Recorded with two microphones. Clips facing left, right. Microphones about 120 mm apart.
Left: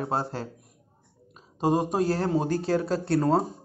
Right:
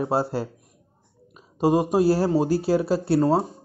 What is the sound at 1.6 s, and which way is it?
A man's voice, 5° right (ahead or behind).